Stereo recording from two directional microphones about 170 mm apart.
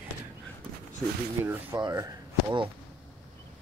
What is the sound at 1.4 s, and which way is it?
Speech, 15° right (ahead or behind).